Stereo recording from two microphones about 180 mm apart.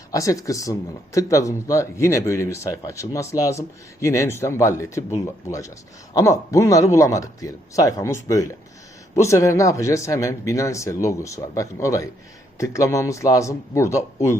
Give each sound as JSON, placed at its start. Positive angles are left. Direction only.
{"t": 0.1, "sound": "speech", "side_deg": 20}